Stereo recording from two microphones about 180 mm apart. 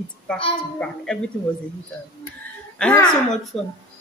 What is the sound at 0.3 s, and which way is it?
Speech, 5° left (ahead or behind).